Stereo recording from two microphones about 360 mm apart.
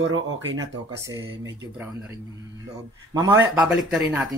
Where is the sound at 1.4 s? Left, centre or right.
Centre.